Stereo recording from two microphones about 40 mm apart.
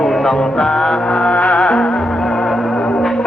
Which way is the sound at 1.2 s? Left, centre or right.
Left.